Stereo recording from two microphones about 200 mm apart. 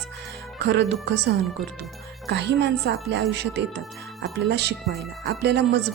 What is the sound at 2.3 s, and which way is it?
Speech, 60° right (ahead or behind).